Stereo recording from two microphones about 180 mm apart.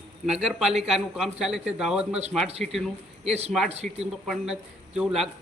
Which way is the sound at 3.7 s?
35° right (ahead or behind).